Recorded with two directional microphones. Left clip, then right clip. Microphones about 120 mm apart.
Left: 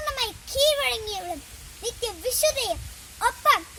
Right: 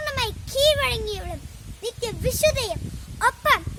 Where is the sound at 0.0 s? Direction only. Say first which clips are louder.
Right 2 dB; 20° right (ahead or behind).